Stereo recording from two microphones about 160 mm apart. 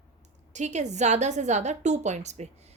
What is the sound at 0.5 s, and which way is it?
A woman's voice, 50° right (ahead or behind).